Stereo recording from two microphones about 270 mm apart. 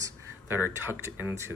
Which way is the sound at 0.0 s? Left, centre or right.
Centre.